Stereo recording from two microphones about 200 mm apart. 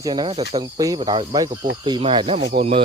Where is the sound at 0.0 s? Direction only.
20° right (ahead or behind).